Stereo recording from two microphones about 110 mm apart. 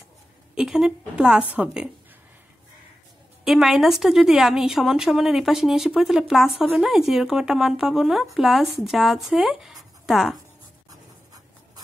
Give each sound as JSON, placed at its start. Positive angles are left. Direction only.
{"t": 0.6, "sound": "a woman's voice", "side_deg": -5}
{"t": 3.4, "sound": "speech", "side_deg": 0}
{"t": 10.9, "sound": "writing", "side_deg": -35}